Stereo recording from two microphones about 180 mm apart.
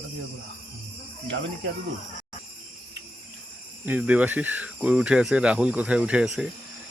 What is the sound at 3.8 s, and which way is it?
Speech, 10° right (ahead or behind).